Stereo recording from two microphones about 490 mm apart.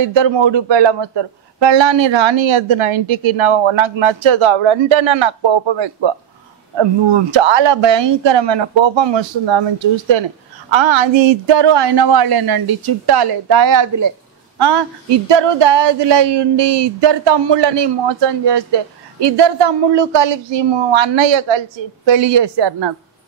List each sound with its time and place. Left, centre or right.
0.0 s a man's voice: right
7.3 s a man's voice: right
14.6 s a man's voice: right